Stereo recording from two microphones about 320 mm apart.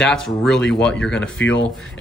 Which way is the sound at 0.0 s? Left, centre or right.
Centre.